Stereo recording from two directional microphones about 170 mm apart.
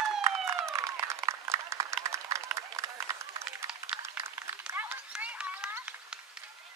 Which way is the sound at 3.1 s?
20° right (ahead or behind).